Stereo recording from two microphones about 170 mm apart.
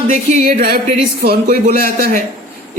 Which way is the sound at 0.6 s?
60° right (ahead or behind).